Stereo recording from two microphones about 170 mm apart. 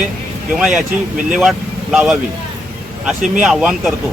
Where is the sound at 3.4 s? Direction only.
Centre (ahead or behind).